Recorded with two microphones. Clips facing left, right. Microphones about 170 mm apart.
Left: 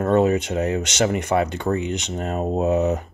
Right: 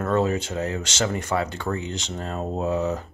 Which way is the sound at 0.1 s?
20° left (ahead or behind).